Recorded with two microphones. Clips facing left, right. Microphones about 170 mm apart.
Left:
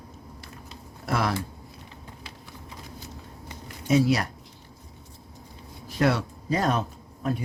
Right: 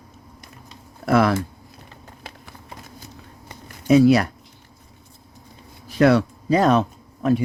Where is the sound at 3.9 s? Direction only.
65° right (ahead or behind).